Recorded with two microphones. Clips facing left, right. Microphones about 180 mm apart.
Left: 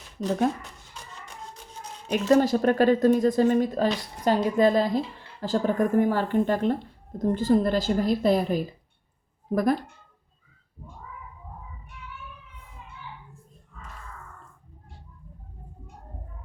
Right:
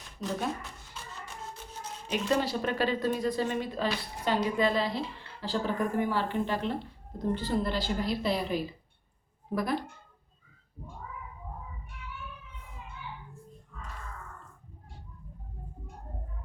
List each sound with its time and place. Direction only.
2.0 s speech: 45° left (ahead or behind)